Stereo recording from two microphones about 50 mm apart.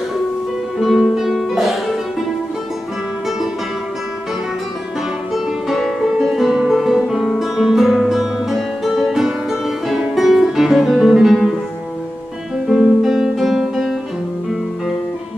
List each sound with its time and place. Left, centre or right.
0.7 s music: centre
5.3 s music: centre
7.3 s guitar: centre
10.1 s music: centre
12.6 s guitar: centre